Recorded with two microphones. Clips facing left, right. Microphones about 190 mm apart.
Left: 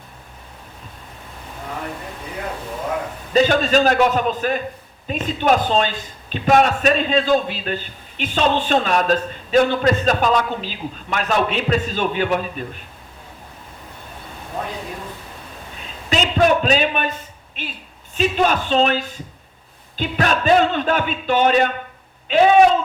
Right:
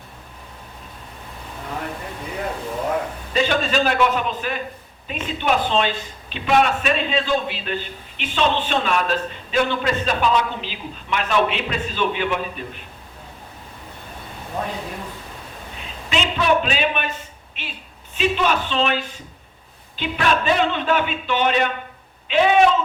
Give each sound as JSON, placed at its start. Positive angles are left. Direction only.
{"t": 3.3, "sound": "a man's voice", "side_deg": 40}
{"t": 16.0, "sound": "a man's voice", "side_deg": 40}
{"t": 18.2, "sound": "a man's voice", "side_deg": 40}